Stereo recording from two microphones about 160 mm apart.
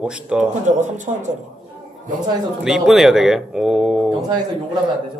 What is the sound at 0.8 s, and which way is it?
Speech, 50° right (ahead or behind).